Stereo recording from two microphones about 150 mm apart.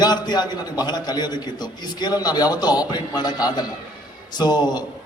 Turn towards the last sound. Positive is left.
turn(degrees=30)  # may be behind; listen again after turning